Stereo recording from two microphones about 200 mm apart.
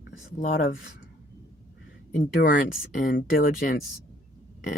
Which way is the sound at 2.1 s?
45° left (ahead or behind).